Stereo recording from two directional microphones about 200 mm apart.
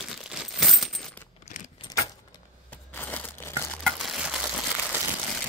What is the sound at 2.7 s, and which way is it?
Crushing, 10° left (ahead or behind).